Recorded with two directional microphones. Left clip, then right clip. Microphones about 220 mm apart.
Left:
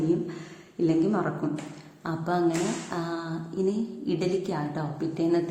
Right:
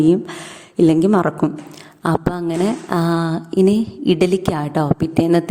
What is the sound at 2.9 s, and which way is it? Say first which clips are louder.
Speech: right 13 dB; 45° right (ahead or behind).